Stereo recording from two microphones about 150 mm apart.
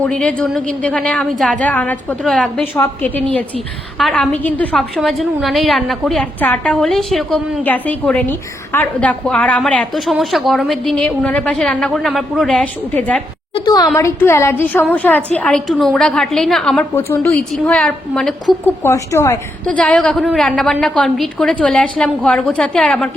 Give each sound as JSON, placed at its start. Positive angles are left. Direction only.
{"t": 0.0, "sound": "a woman's voice", "side_deg": 5}
{"t": 2.7, "sound": "a woman's voice", "side_deg": 15}
{"t": 16.9, "sound": "a woman's voice", "side_deg": 15}
{"t": 17.3, "sound": "a woman's voice", "side_deg": 0}
{"t": 18.8, "sound": "a woman's voice", "side_deg": 20}
{"t": 19.6, "sound": "a woman's voice", "side_deg": 10}